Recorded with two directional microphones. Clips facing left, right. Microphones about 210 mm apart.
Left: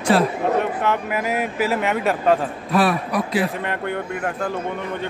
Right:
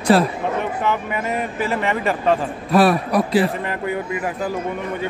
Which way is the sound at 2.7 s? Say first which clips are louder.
Right 4 dB; 40° right (ahead or behind).